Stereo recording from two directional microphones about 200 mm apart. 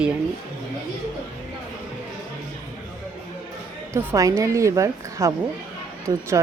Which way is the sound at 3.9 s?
15° right (ahead or behind).